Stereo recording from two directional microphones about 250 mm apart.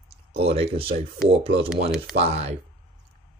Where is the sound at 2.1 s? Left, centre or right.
Right.